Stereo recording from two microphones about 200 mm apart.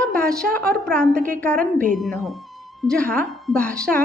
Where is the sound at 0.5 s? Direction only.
5° left (ahead or behind).